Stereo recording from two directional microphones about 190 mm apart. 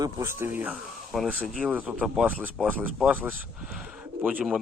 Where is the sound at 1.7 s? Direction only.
10° right (ahead or behind).